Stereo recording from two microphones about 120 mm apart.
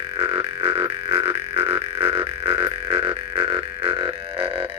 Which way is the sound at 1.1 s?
55° right (ahead or behind).